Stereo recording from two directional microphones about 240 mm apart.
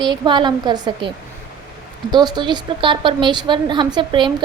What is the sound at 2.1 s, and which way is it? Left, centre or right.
Speech, centre.